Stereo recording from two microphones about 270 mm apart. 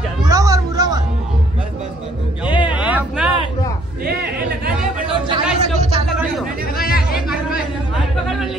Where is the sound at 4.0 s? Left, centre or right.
Right.